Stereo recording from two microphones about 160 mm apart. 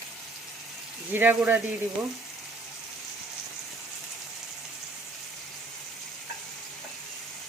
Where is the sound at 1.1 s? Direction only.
10° right (ahead or behind).